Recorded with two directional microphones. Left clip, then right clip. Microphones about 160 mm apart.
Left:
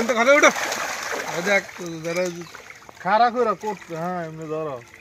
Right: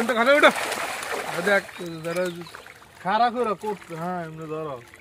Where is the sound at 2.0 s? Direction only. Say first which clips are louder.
Left 2 dB; 45° left (ahead or behind).